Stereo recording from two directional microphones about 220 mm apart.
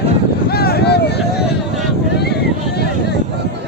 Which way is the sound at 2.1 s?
50° left (ahead or behind).